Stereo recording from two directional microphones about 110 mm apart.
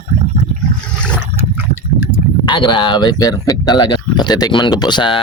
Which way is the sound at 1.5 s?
25° right (ahead or behind).